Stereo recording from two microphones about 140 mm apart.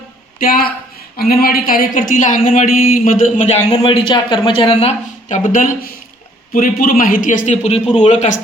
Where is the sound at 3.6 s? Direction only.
30° left (ahead or behind); by 5.7 s 70° left (ahead or behind).